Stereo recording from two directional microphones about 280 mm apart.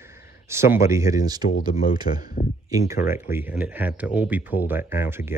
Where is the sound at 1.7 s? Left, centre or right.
Left.